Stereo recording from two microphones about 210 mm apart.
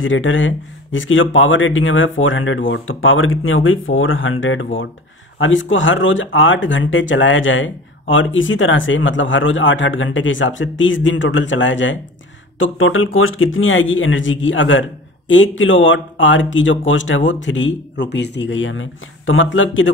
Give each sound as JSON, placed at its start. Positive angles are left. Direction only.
{"t": 0.0, "sound": "speech", "side_deg": 65}